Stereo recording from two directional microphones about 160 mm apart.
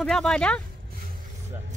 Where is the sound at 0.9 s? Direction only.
65° right (ahead or behind).